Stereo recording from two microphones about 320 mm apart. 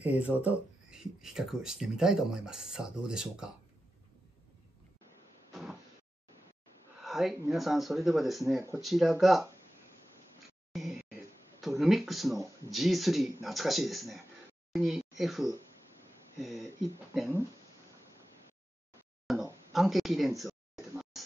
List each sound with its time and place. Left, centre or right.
0.0 s speech: centre
5.5 s sliding door: centre
7.0 s speech: centre
10.7 s speech: centre
17.1 s speech: centre
19.2 s a sound: centre